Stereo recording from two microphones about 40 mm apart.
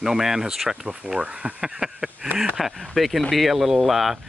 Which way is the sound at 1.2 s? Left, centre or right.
Right.